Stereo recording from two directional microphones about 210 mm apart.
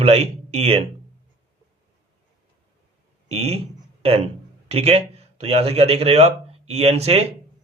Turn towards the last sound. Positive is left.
turn(degrees=-30)  # may be behind; listen again after turning